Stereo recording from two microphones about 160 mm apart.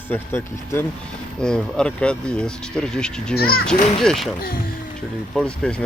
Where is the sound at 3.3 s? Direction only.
70° left (ahead or behind).